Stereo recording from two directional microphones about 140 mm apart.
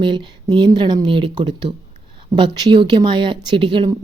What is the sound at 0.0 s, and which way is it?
Speech, 35° right (ahead or behind).